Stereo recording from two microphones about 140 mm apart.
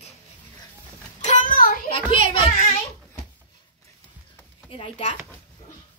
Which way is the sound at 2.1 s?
40° left (ahead or behind).